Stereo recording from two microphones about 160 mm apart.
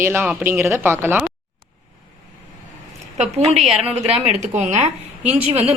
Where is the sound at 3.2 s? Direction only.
40° right (ahead or behind).